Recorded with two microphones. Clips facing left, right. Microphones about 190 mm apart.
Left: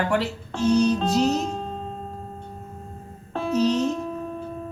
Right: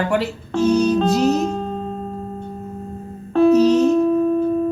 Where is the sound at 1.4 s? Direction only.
60° right (ahead or behind).